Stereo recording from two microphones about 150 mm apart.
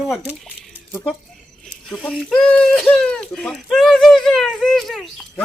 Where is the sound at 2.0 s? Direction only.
5° left (ahead or behind).